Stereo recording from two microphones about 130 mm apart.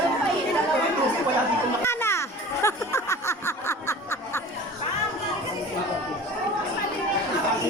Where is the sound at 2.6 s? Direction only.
20° left (ahead or behind).